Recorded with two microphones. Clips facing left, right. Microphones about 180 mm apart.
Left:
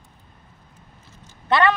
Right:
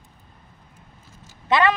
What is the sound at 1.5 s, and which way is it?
Speech, 5° right (ahead or behind).